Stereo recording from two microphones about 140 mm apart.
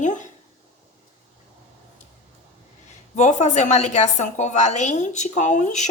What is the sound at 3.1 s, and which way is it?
A woman's voice, 55° left (ahead or behind).